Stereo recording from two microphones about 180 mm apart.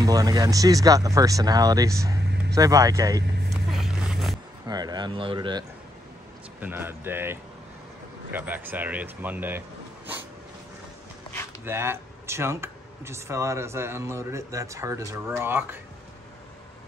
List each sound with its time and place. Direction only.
0.0 s speech: 20° right (ahead or behind)
3.4 s music: centre (ahead or behind)
4.6 s speech: 20° right (ahead or behind)
6.6 s speech: 10° right (ahead or behind)
11.6 s speech: 15° right (ahead or behind)